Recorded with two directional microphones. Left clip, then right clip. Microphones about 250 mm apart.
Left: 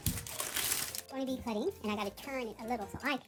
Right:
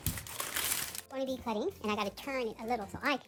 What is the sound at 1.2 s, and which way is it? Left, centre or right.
A woman's voice, right.